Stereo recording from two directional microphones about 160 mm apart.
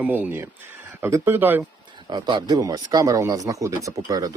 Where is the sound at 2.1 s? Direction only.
25° right (ahead or behind).